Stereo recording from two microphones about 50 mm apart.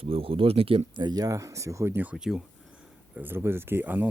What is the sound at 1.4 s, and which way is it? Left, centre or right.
Speech, right.